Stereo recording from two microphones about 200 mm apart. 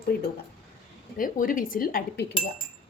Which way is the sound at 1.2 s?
45° left (ahead or behind).